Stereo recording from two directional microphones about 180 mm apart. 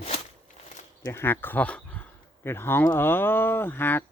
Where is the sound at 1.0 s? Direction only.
15° left (ahead or behind).